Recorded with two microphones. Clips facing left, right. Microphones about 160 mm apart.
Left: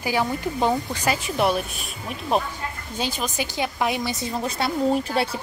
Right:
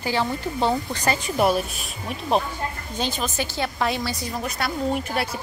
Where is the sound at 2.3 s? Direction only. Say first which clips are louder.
Right 1 dB; 5° left (ahead or behind).